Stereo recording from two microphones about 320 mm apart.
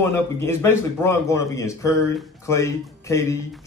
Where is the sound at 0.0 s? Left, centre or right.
Centre.